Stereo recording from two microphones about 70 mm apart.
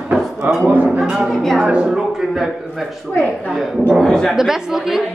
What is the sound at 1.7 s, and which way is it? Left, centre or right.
Speech, centre.